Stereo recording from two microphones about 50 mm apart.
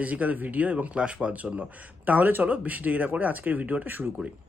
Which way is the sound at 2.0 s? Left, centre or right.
Right.